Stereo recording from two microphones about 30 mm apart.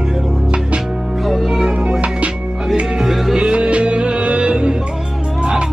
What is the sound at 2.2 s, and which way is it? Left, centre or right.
Music, right.